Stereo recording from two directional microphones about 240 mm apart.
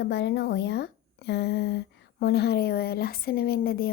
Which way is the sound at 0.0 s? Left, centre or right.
Left.